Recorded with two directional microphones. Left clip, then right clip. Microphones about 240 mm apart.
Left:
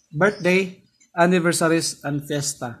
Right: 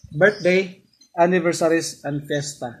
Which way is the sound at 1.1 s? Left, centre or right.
Left.